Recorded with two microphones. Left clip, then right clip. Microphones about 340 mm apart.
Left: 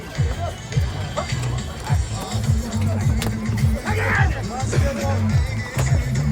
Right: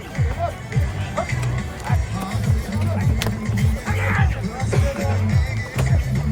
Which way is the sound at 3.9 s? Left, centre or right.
Left.